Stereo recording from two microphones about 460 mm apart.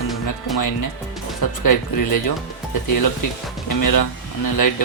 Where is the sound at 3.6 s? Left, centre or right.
Left.